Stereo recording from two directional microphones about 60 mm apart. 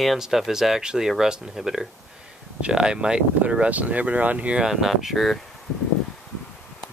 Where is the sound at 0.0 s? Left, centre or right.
Centre; by 4.6 s right.